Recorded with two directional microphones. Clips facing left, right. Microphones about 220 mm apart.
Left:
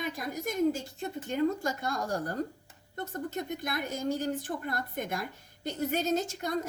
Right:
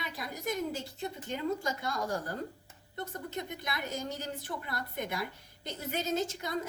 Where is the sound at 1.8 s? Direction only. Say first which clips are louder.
Left 2 dB; 45° left (ahead or behind).